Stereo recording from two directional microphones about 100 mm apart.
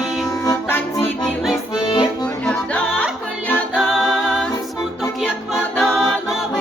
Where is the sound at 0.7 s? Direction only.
20° left (ahead or behind).